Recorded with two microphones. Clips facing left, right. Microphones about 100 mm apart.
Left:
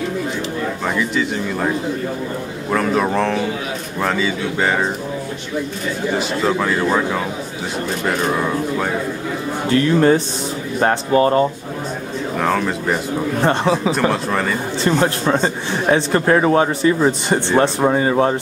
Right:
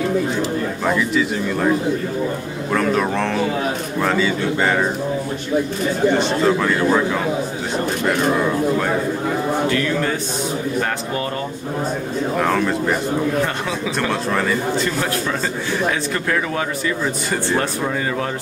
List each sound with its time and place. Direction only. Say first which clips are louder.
0.8 s a man's voice: right 2 dB; centre (ahead or behind)
2.7 s a man's voice: left 1 dB; 5° left (ahead or behind)
6.1 s a man's voice: right 2 dB; centre (ahead or behind)
9.7 s a man's voice: left 6 dB; 35° left (ahead or behind)
12.4 s a man's voice: even; centre (ahead or behind)
13.4 s a man's voice: left 5 dB; 30° left (ahead or behind)
14.3 s a man's voice: even; centre (ahead or behind)
14.8 s a man's voice: left 4 dB; 30° left (ahead or behind)